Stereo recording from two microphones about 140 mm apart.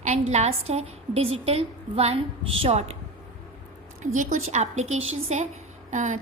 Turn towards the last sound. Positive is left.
turn(degrees=-60)  # may be behind; listen again after turning